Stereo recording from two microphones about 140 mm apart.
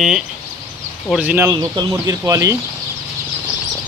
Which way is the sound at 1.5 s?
30° right (ahead or behind).